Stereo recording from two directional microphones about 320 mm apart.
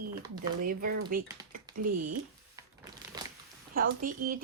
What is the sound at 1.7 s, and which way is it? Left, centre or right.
Speech, right.